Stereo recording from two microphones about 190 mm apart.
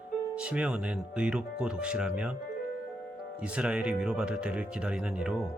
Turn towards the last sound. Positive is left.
turn(degrees=-5)  # may be behind; listen again after turning